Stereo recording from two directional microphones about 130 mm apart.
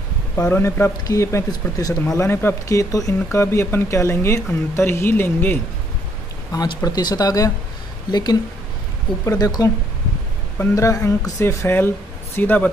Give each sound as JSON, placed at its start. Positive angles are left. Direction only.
{"t": 0.4, "sound": "speech", "side_deg": 20}
{"t": 6.5, "sound": "speech", "side_deg": 30}